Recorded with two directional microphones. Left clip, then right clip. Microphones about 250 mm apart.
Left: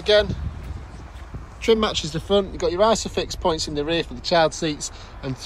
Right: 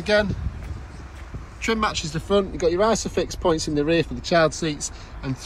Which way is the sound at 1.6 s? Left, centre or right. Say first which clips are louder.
Left 4 dB; centre.